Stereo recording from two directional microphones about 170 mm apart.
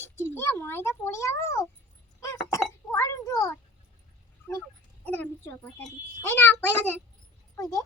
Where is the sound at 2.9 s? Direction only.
15° left (ahead or behind).